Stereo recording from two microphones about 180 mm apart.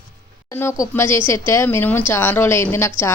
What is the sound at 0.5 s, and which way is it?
A woman's voice, 15° left (ahead or behind).